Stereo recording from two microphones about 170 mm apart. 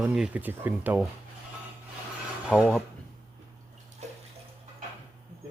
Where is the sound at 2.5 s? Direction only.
5° left (ahead or behind).